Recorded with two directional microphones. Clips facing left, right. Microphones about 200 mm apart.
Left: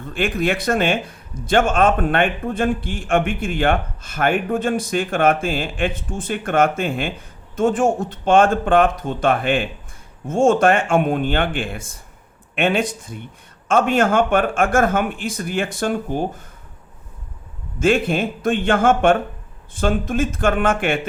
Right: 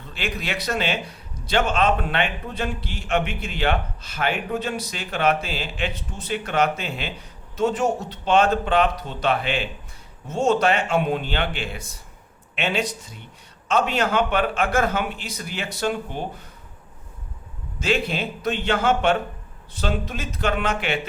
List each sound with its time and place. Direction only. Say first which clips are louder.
0.0 s a man's voice: left 9 dB; 50° left (ahead or behind)
17.7 s a man's voice: left 6 dB; 50° left (ahead or behind)